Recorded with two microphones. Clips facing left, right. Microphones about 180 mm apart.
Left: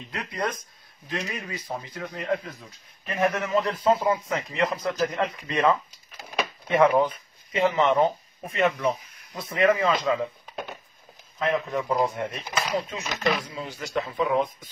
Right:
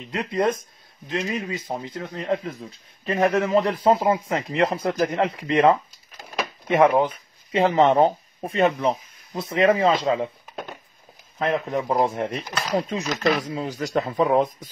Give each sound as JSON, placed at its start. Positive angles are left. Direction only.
{"t": 0.1, "sound": "speech", "side_deg": -25}
{"t": 11.3, "sound": "speech", "side_deg": -35}